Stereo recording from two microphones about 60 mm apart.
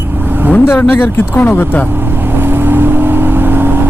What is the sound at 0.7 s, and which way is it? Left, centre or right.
Speech, left.